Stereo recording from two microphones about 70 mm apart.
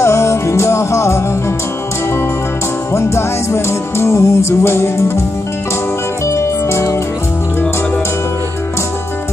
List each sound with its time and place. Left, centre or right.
0.0 s music: left
2.9 s music: left
6.2 s music: left